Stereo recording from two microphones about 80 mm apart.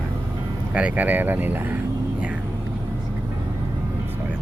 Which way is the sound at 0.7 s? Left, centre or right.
Centre.